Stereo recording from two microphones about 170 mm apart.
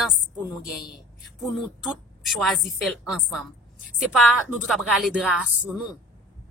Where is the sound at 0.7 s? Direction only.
Centre (ahead or behind).